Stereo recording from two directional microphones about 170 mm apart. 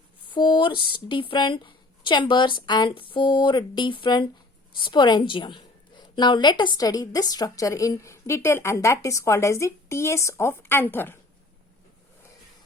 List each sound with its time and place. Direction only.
0.3 s a woman's voice: 25° left (ahead or behind); by 11.2 s 10° left (ahead or behind)